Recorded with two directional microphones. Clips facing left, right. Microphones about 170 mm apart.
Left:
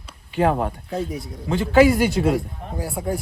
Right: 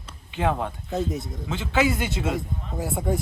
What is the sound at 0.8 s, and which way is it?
Speech, centre (ahead or behind).